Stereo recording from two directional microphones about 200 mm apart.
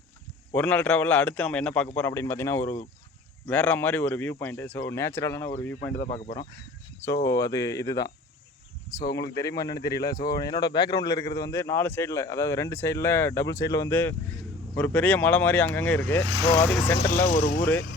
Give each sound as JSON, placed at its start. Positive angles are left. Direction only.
{"t": 0.5, "sound": "a man's voice", "side_deg": 5}
{"t": 9.3, "sound": "a man's voice", "side_deg": 15}
{"t": 17.2, "sound": "speech", "side_deg": 40}